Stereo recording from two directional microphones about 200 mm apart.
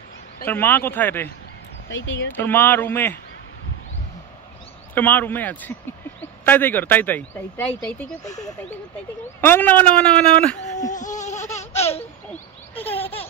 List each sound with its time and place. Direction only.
0.5 s speech: 10° left (ahead or behind)
1.9 s speech: 65° left (ahead or behind)
2.3 s speech: 10° left (ahead or behind)
4.9 s speech: 10° left (ahead or behind)
10.9 s goat: 40° left (ahead or behind)
11.5 s baby laughter: 30° left (ahead or behind)